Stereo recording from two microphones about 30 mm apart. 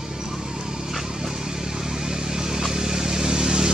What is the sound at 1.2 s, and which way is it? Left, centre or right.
Vehicle, centre.